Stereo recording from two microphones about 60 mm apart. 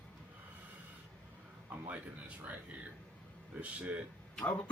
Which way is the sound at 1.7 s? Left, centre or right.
Right.